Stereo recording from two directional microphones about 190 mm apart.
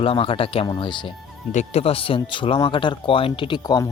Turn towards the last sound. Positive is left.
turn(degrees=20)  # may be behind; listen again after turning